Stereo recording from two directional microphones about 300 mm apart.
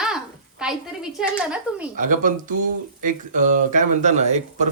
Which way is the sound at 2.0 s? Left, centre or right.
Right.